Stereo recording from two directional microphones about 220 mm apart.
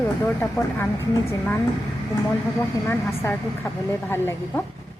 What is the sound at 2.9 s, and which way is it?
Speech, 10° left (ahead or behind).